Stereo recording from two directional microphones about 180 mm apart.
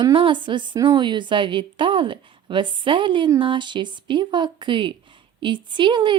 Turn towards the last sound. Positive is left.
turn(degrees=-25)  # may be behind; listen again after turning